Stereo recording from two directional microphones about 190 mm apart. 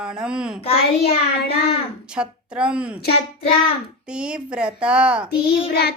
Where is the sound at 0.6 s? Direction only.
30° left (ahead or behind).